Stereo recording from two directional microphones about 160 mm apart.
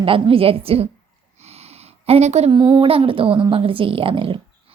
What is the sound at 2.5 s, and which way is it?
Speech, 25° right (ahead or behind).